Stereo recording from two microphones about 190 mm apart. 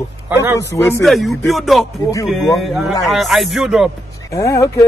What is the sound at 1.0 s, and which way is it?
A man's voice, centre (ahead or behind).